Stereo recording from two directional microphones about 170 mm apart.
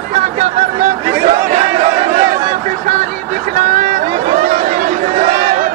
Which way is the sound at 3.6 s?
50° right (ahead or behind).